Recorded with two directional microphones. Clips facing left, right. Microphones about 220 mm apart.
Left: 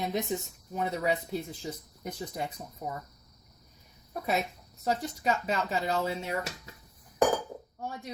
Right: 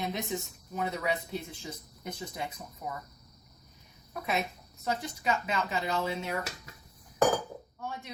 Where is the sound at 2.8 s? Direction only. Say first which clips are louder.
Left 2 dB; 35° left (ahead or behind).